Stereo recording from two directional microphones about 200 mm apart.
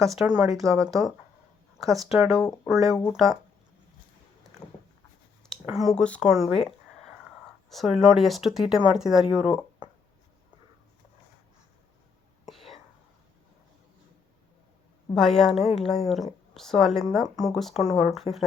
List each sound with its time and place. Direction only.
0.0 s speech: centre (ahead or behind)
0.7 s speech: 15° right (ahead or behind)
1.8 s speech: centre (ahead or behind)
5.5 s speech: centre (ahead or behind)
12.5 s whispering: centre (ahead or behind)
15.1 s speech: centre (ahead or behind)
17.2 s speech: 20° right (ahead or behind)
17.5 s speech: centre (ahead or behind)